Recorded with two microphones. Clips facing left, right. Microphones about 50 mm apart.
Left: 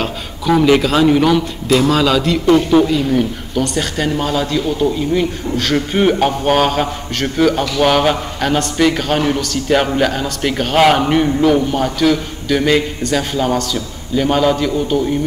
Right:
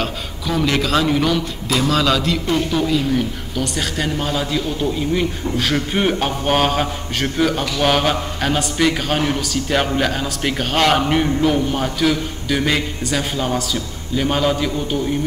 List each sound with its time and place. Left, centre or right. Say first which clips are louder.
0.0 s a man's voice: left 4 dB; centre
2.5 s speech: left 9 dB; centre
2.9 s a man's voice: left 3 dB; centre